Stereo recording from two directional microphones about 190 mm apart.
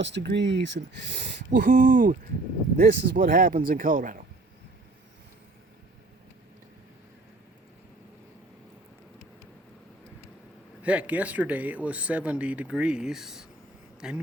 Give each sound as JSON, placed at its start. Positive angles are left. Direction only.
{"t": 0.0, "sound": "speech", "side_deg": -65}
{"t": 10.8, "sound": "speech", "side_deg": -5}